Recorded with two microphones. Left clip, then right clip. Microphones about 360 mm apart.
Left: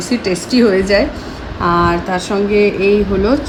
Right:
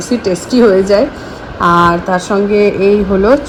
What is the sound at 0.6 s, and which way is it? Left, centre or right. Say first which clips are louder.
Speech: right 4 dB; right.